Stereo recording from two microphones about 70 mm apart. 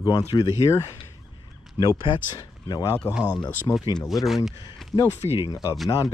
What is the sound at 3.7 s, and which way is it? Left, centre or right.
Speech, left.